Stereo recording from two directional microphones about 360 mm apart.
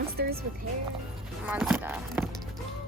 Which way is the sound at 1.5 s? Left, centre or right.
Centre.